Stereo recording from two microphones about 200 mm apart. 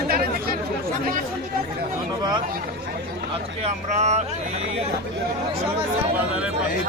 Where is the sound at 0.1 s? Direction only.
50° right (ahead or behind).